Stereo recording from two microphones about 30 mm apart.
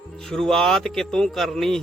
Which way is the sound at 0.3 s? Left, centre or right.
Centre.